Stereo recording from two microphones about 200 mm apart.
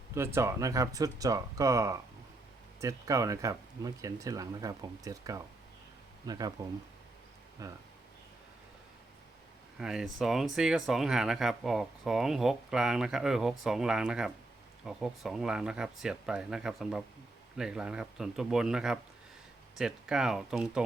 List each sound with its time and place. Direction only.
0.1 s speech: 10° right (ahead or behind)
7.6 s speech: 15° right (ahead or behind)
9.7 s speech: 5° right (ahead or behind)